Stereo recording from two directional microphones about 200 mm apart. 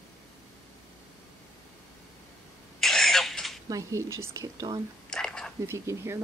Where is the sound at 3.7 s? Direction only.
15° right (ahead or behind).